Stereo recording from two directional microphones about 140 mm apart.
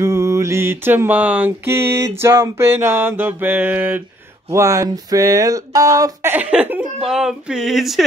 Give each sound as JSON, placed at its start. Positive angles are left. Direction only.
{"t": 0.0, "sound": "mantra", "side_deg": -20}
{"t": 4.5, "sound": "speech", "side_deg": -20}
{"t": 6.3, "sound": "speech", "side_deg": -10}